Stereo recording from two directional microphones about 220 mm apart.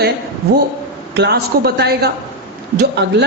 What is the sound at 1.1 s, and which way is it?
A man's voice, 50° right (ahead or behind).